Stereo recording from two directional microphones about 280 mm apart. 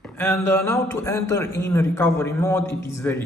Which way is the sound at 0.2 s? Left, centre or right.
Centre.